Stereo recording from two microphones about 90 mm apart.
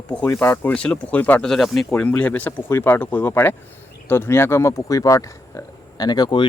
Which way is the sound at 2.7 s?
25° left (ahead or behind).